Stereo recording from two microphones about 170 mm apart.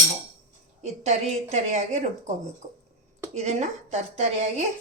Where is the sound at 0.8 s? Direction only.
40° right (ahead or behind).